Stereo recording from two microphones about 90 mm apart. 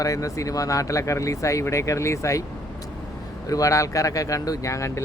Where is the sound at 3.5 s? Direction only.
40° left (ahead or behind).